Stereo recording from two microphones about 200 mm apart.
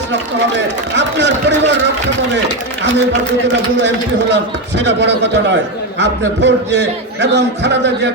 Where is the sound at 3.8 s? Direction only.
60° right (ahead or behind).